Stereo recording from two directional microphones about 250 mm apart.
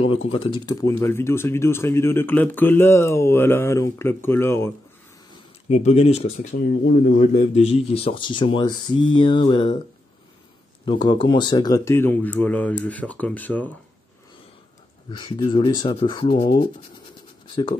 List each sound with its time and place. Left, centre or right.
0.3 s speech: left
5.7 s speech: left
6.5 s speech: left
7.3 s speech: left
10.9 s speech: centre
15.0 s speech: centre